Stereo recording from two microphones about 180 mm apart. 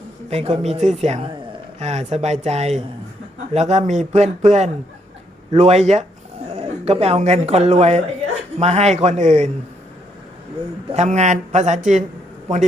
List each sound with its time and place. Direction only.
0.3 s a man's voice: 35° right (ahead or behind)
10.9 s speech: 40° right (ahead or behind)